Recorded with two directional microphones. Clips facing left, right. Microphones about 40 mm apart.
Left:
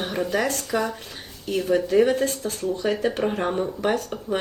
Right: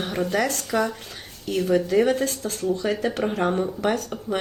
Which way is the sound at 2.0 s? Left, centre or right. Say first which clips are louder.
Left 1 dB; left.